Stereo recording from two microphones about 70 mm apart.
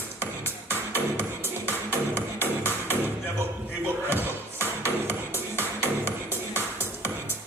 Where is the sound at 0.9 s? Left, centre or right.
Right.